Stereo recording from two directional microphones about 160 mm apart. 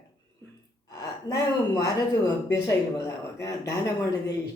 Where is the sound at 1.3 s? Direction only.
25° left (ahead or behind).